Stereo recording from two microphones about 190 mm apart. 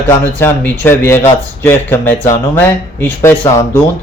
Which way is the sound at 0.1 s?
10° left (ahead or behind).